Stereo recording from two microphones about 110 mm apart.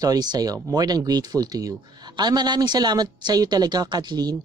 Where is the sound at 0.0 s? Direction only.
35° right (ahead or behind).